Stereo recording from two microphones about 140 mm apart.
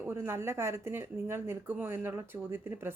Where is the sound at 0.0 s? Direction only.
15° right (ahead or behind).